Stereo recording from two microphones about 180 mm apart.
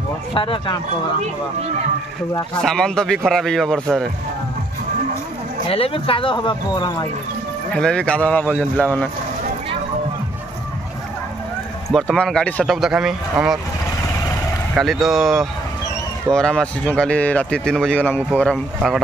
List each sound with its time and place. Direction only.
0.3 s speech: 30° left (ahead or behind)
2.6 s speech: 5° left (ahead or behind)
5.7 s speech: 30° left (ahead or behind)
7.7 s speech: 5° left (ahead or behind)
11.9 s speech: centre (ahead or behind)
14.8 s speech: centre (ahead or behind)